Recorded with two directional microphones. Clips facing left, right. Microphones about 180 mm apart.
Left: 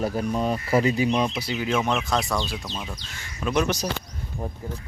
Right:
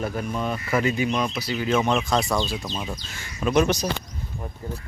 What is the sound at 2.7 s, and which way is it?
Speech, 70° left (ahead or behind).